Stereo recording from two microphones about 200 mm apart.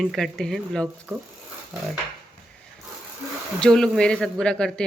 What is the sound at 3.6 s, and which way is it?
Speech, 5° left (ahead or behind).